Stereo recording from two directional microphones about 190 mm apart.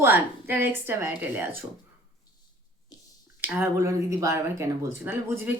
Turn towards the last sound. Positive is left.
turn(degrees=-10)  # may be behind; listen again after turning